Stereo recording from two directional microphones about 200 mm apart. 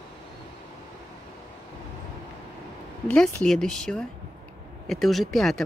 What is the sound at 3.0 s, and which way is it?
Speech, 5° left (ahead or behind).